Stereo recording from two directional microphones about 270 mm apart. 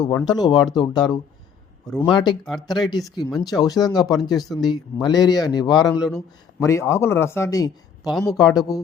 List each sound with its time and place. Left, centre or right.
0.0 s speech: centre
2.4 s speech: centre
2.6 s speech: centre
8.1 s speech: centre
8.4 s speech: centre